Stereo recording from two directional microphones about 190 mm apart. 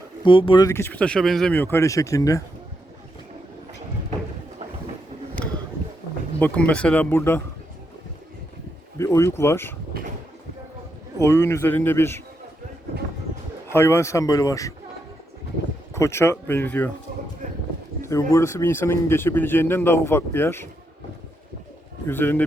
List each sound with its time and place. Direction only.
0.3 s speech: 25° left (ahead or behind)
6.4 s speech: 5° left (ahead or behind)
9.0 s speech: 15° left (ahead or behind)
11.2 s speech: 15° left (ahead or behind)
13.7 s speech: 15° left (ahead or behind)
16.0 s speech: 15° left (ahead or behind)
18.0 s speech: 15° left (ahead or behind)
22.0 s speech: 10° left (ahead or behind)